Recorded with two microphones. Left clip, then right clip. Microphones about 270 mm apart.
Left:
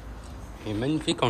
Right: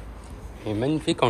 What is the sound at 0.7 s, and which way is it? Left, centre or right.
Speech, centre.